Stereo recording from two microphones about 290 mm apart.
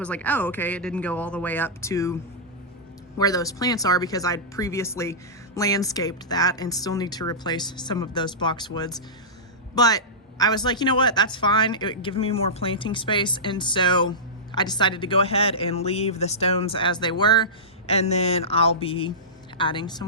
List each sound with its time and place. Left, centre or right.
0.0 s speech: centre
3.2 s a woman's voice: centre